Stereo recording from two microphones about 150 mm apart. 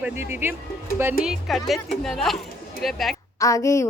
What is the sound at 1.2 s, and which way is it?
Speech, centre (ahead or behind).